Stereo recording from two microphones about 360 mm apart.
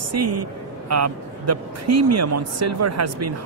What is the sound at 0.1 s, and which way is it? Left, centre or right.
Speech, right.